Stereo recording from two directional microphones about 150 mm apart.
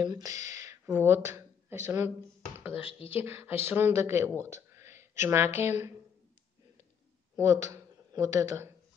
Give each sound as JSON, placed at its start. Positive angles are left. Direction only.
{"t": 0.0, "sound": "speech", "side_deg": -25}
{"t": 2.6, "sound": "speech", "side_deg": 40}
{"t": 3.2, "sound": "speech", "side_deg": -15}
{"t": 7.3, "sound": "speech", "side_deg": -20}